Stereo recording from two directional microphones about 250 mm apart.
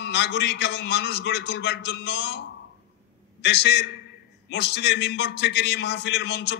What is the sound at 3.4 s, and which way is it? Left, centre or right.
A man's voice, left.